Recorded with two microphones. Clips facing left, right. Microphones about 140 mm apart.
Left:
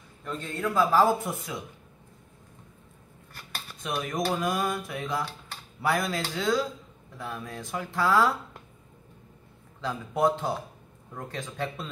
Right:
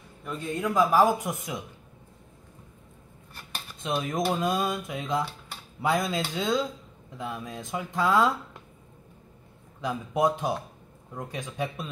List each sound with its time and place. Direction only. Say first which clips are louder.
0.2 s a man's voice: right 1 dB; 10° right (ahead or behind)
3.8 s speech: right 2 dB; 25° right (ahead or behind)
9.8 s a man's voice: right 1 dB; 15° right (ahead or behind)